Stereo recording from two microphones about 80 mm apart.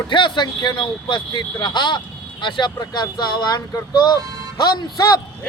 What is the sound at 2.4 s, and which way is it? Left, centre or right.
Speech, left.